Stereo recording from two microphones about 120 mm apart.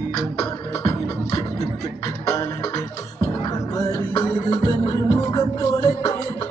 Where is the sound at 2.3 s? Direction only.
25° left (ahead or behind).